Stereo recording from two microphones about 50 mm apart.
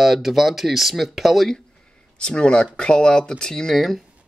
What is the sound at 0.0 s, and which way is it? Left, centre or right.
Speech, centre.